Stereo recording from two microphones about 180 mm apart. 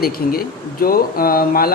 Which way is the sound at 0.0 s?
55° left (ahead or behind).